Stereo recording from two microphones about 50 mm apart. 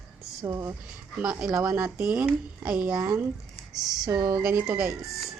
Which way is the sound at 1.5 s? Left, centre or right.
Right.